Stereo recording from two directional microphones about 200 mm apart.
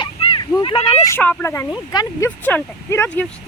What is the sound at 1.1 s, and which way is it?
Speech, 10° left (ahead or behind).